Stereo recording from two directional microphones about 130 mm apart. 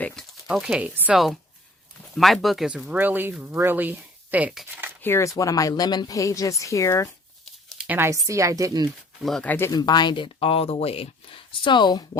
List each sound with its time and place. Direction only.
0.0 s speech: 5° left (ahead or behind)
2.1 s speech: centre (ahead or behind)
5.0 s speech: 20° left (ahead or behind)
7.4 s a sound: 5° right (ahead or behind)
7.9 s speech: 20° right (ahead or behind)
9.2 s speech: centre (ahead or behind)
9.5 s speech: 20° left (ahead or behind)
9.7 s speech: 35° left (ahead or behind)